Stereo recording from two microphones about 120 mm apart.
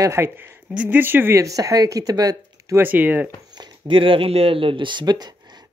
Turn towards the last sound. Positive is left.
turn(degrees=-35)  # may be behind; listen again after turning